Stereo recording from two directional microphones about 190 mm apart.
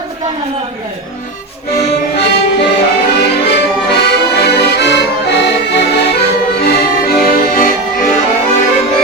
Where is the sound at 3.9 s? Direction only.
60° left (ahead or behind).